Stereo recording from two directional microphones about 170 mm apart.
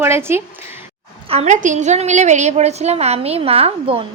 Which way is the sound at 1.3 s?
45° right (ahead or behind).